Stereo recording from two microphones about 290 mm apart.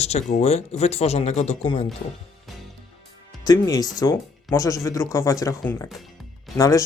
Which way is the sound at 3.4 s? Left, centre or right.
Centre.